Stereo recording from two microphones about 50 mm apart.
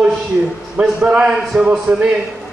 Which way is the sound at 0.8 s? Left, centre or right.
Right.